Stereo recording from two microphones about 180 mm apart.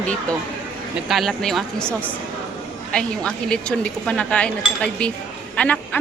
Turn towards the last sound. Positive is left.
turn(degrees=10)  # may be behind; listen again after turning